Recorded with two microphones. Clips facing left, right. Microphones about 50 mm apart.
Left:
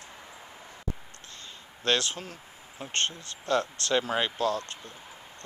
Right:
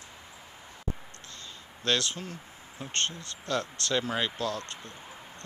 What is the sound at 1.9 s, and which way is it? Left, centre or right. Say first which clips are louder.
Speech: left 1 dB; left.